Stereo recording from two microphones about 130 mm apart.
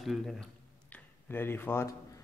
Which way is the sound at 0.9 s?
15° left (ahead or behind).